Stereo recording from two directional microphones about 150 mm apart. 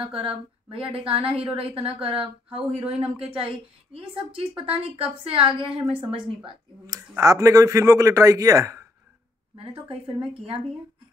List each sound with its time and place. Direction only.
0.0 s a woman's voice: 40° right (ahead or behind)
7.0 s speech: 20° right (ahead or behind)
9.6 s a woman's voice: 40° right (ahead or behind)